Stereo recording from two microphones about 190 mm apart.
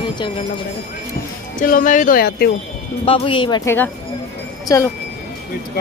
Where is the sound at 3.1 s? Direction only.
30° left (ahead or behind).